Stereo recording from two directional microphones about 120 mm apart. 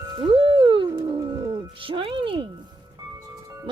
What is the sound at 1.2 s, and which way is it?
Music, 35° right (ahead or behind).